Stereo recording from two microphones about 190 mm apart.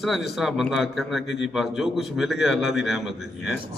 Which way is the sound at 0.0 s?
Centre (ahead or behind).